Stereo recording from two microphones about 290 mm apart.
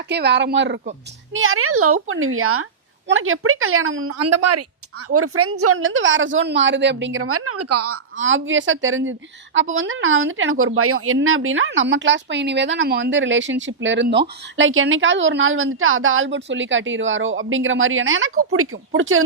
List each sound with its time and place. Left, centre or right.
0.1 s a woman's voice: right